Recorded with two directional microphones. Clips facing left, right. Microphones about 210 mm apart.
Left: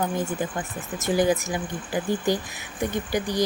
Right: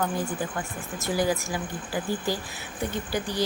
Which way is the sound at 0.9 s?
20° left (ahead or behind).